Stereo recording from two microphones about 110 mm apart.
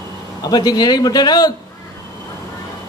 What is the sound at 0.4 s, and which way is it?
Speech, 40° left (ahead or behind).